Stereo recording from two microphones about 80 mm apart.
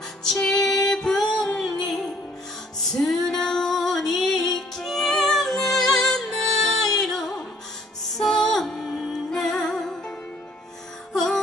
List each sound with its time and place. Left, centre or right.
0.4 s female singing: centre
1.6 s music: centre